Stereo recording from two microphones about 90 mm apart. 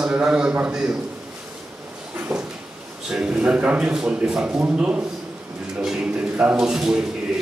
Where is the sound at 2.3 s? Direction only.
5° right (ahead or behind).